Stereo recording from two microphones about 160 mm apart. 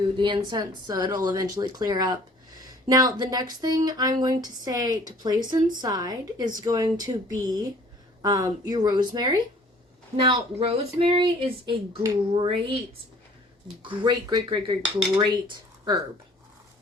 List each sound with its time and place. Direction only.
0.2 s speech: 25° right (ahead or behind)
10.2 s speech: 35° right (ahead or behind)
13.8 s speech: 30° right (ahead or behind)